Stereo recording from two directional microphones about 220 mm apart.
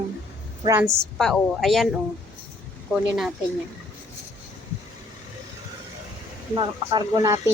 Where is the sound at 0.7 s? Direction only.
10° right (ahead or behind).